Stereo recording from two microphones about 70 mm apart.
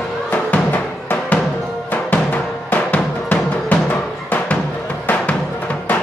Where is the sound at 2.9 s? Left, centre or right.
Left.